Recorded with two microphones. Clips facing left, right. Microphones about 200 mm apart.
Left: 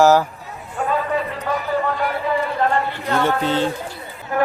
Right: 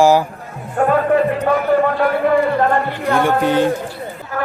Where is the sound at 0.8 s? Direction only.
60° right (ahead or behind).